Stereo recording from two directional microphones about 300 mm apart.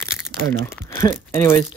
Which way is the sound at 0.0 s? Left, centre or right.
Centre.